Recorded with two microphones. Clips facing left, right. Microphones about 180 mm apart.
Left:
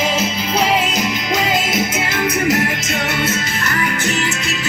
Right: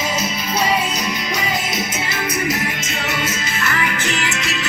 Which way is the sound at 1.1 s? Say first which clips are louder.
Left 4 dB; 90° left.